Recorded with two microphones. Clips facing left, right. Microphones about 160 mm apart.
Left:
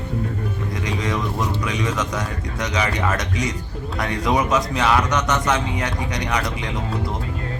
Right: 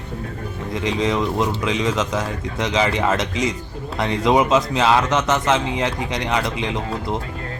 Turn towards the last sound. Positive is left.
turn(degrees=-25)  # may be behind; listen again after turning